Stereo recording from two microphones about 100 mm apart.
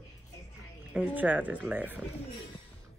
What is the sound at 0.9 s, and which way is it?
Speech, 15° right (ahead or behind).